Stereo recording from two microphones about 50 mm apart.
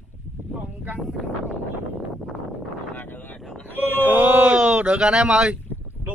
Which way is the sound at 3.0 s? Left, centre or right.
Left.